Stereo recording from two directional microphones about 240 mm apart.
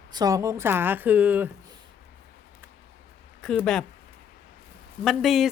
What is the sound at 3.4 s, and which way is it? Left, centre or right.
Speech, centre.